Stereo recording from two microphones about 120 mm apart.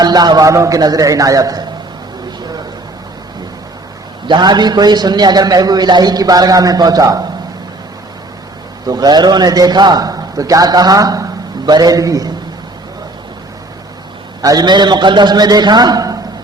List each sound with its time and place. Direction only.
0.0 s a man's voice: 35° right (ahead or behind)
4.3 s a man's voice: 35° right (ahead or behind)
8.9 s a man's voice: 35° right (ahead or behind)
14.4 s a man's voice: 35° right (ahead or behind)